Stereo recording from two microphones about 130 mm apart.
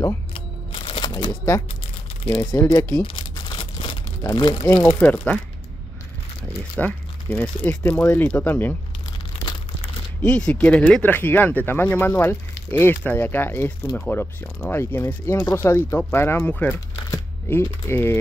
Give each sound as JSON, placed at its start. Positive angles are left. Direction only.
{"t": 0.3, "sound": "a sound", "side_deg": 40}
{"t": 2.2, "sound": "speech", "side_deg": 20}
{"t": 3.0, "sound": "crumpling", "side_deg": 40}
{"t": 4.2, "sound": "speech", "side_deg": 30}
{"t": 5.0, "sound": "speech", "side_deg": 10}
{"t": 6.8, "sound": "speech", "side_deg": 10}
{"t": 10.2, "sound": "speech", "side_deg": 10}
{"t": 17.1, "sound": "a sound", "side_deg": 15}
{"t": 17.8, "sound": "speech", "side_deg": 15}